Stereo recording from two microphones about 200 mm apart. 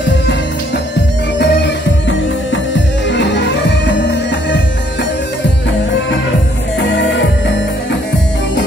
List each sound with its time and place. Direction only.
1.4 s music: 60° left (ahead or behind)
6.8 s music: 65° left (ahead or behind)